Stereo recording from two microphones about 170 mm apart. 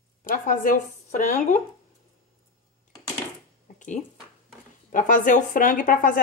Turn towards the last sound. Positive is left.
turn(degrees=50)  # may be behind; listen again after turning